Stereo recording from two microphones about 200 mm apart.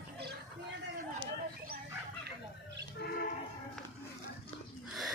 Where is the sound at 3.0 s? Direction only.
55° left (ahead or behind).